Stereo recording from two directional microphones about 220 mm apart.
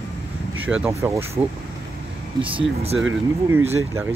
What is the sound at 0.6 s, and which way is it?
Speech, 10° right (ahead or behind).